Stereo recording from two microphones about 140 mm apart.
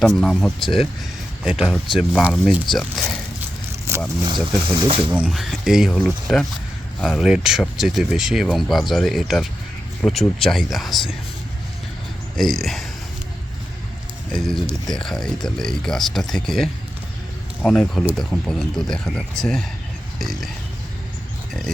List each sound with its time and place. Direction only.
0.2 s speech: centre (ahead or behind)
3.9 s speech: 20° right (ahead or behind)
4.8 s speech: 35° right (ahead or behind)
5.1 s speech: 5° right (ahead or behind)
12.4 s speech: centre (ahead or behind)
14.3 s speech: centre (ahead or behind)